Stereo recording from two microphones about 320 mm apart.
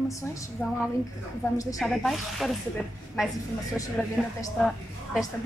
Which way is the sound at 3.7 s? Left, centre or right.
Centre.